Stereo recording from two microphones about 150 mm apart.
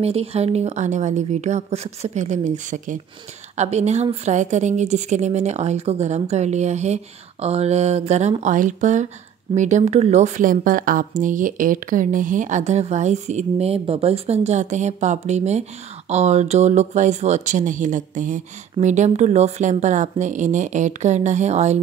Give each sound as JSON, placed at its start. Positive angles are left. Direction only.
{"t": 0.0, "sound": "speech", "side_deg": -40}